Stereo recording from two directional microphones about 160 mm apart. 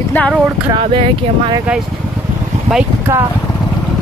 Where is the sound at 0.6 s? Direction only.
35° right (ahead or behind).